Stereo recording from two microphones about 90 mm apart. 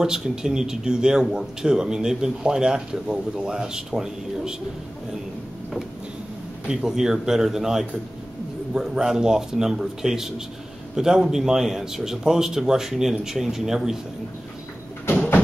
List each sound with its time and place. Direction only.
0.0 s a man's voice: 5° right (ahead or behind)
6.7 s a man's voice: 5° right (ahead or behind)
15.0 s sliding door: 25° left (ahead or behind)